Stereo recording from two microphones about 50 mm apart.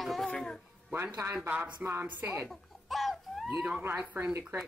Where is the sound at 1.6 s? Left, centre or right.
Right.